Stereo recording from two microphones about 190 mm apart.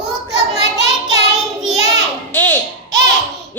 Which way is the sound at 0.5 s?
35° left (ahead or behind).